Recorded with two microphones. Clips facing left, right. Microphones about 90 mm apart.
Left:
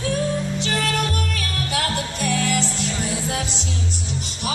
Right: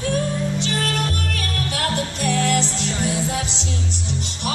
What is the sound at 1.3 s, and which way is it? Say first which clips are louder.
Music: even; 50° right (ahead or behind).